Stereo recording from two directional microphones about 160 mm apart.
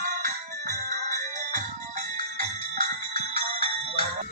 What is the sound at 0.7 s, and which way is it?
Music, 55° right (ahead or behind).